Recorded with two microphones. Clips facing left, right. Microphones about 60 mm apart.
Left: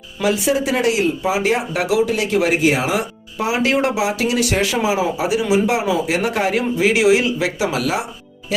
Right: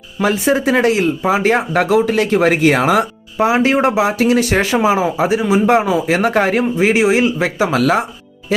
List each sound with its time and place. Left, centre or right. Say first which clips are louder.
0.2 s speech: right 3 dB; right
3.3 s speech: right 5 dB; right